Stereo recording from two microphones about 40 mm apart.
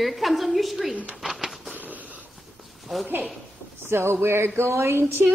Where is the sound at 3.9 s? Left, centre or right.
Right.